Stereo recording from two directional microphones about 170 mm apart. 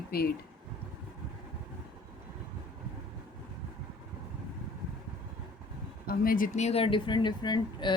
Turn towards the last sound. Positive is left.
turn(degrees=25)  # may be behind; listen again after turning